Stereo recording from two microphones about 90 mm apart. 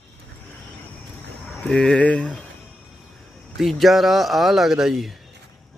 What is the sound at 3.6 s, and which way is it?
Speech, centre (ahead or behind).